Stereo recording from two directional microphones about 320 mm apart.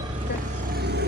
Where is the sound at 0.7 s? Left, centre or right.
Right.